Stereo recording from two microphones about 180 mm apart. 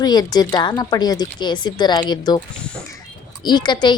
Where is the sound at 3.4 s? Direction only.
25° left (ahead or behind).